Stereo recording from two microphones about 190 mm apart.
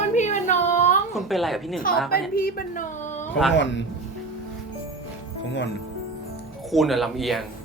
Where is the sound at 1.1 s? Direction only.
Centre (ahead or behind).